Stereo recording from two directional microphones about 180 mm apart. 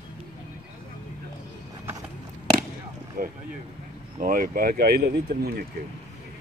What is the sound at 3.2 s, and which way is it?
Speech, 55° right (ahead or behind).